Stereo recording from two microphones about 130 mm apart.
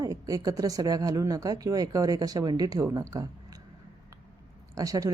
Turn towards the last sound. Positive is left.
turn(degrees=-25)  # may be behind; listen again after turning